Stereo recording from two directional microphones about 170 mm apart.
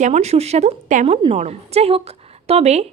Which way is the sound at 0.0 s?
40° right (ahead or behind).